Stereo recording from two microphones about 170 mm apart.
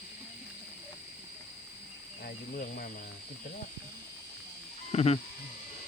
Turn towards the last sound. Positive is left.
turn(degrees=40)  # may be behind; listen again after turning